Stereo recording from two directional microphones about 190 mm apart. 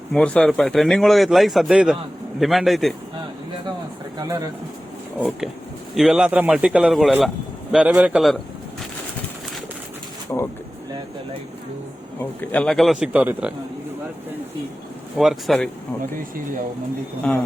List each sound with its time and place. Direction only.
0.1 s a man's voice: 5° left (ahead or behind)
4.2 s speech: 20° right (ahead or behind)
5.9 s a man's voice: centre (ahead or behind)
10.3 s speech: 15° left (ahead or behind)
12.2 s a man's voice: 10° left (ahead or behind); by 13.5 s 5° right (ahead or behind)
15.2 s a man's voice: centre (ahead or behind)
17.3 s a man's voice: 5° left (ahead or behind)